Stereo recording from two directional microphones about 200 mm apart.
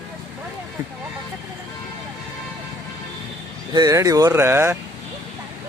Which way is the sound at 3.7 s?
20° right (ahead or behind).